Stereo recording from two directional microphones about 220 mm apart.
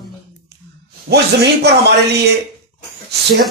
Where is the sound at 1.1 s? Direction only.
50° right (ahead or behind).